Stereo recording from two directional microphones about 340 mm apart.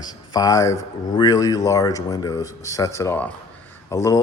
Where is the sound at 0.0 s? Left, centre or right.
Centre.